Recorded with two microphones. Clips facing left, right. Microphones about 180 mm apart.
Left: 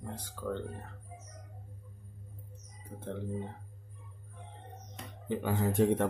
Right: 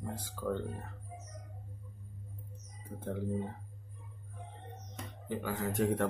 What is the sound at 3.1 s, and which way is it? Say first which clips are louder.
Speech: right 2 dB; 10° right (ahead or behind).